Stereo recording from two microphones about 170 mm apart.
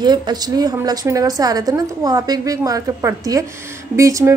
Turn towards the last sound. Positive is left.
turn(degrees=-20)  # may be behind; listen again after turning